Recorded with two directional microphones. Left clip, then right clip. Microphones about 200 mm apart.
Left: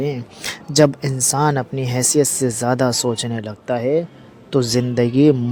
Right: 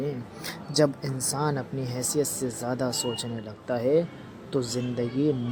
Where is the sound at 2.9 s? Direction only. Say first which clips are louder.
Left 10 dB; 90° left.